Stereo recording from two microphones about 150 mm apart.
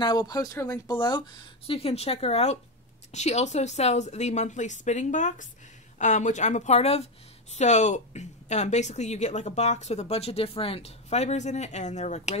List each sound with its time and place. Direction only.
0.0 s speech: 30° left (ahead or behind)
1.8 s speech: 40° left (ahead or behind)